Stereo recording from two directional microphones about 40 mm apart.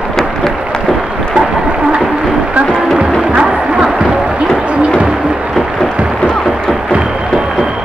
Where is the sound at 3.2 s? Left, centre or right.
Right.